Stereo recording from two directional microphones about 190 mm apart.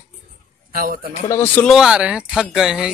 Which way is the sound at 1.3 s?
15° left (ahead or behind).